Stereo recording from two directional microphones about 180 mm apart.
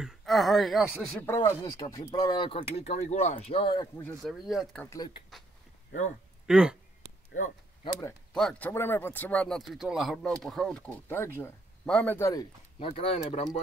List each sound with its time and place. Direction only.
0.0 s speech: centre (ahead or behind)
1.2 s speech: 15° left (ahead or behind)
4.2 s speech: centre (ahead or behind)
4.8 s speech: 20° left (ahead or behind)
6.4 s speech: 5° right (ahead or behind)
7.3 s speech: 45° left (ahead or behind)
8.3 s speech: 5° left (ahead or behind)
12.7 s speech: 35° left (ahead or behind)